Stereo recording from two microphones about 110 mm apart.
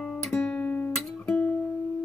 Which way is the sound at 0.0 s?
5° left (ahead or behind).